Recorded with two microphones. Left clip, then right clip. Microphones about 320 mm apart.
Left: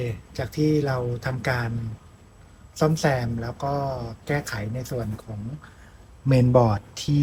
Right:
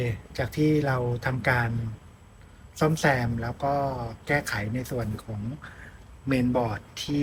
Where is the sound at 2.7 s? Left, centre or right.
Centre.